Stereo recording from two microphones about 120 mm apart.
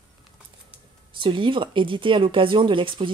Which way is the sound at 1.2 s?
45° right (ahead or behind).